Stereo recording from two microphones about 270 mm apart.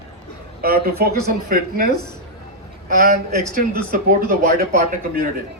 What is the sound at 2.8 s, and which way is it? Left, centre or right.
A man's voice, right.